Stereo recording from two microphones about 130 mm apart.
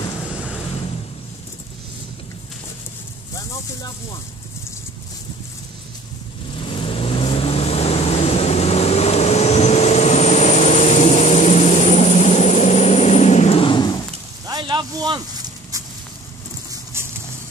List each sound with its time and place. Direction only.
0.3 s vehicle: 10° right (ahead or behind)
6.6 s vehicle: 45° left (ahead or behind)
14.5 s a sound: 35° right (ahead or behind)